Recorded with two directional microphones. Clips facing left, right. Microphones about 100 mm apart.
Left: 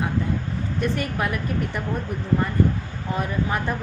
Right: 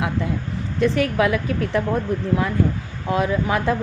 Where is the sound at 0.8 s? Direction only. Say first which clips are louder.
Right 7 dB; 90° right.